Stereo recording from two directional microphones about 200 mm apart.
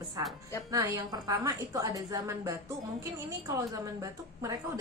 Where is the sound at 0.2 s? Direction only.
15° right (ahead or behind).